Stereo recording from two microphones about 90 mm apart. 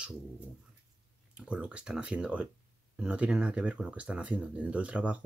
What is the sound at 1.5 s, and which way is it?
Speech, 10° right (ahead or behind).